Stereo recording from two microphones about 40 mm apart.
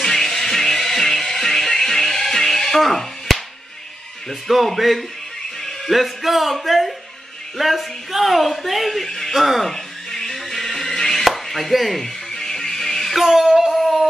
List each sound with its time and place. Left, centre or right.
0.0 s music: centre
4.3 s speech: centre
10.1 s music: centre
13.2 s a sound: centre